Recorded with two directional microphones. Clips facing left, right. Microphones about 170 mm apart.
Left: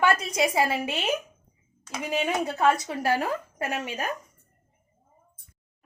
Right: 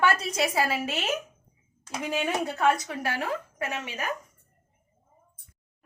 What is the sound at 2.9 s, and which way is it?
Speech, 40° left (ahead or behind).